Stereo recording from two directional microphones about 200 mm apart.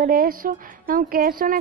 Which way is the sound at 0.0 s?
45° right (ahead or behind).